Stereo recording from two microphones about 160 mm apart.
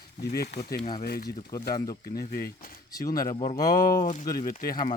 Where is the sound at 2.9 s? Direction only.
20° left (ahead or behind).